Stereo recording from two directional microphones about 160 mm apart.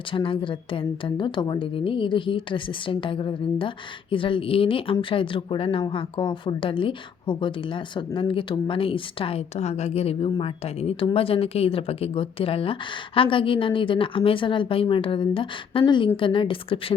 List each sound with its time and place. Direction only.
0.1 s a woman's voice: 30° left (ahead or behind)